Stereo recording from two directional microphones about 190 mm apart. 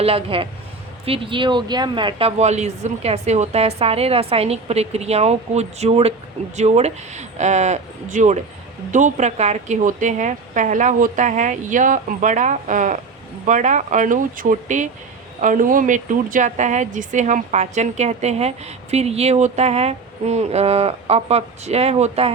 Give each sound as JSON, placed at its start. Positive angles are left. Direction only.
{"t": 0.0, "sound": "speech", "side_deg": -30}